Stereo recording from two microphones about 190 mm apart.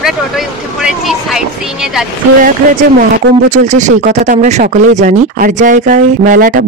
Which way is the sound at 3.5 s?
40° right (ahead or behind).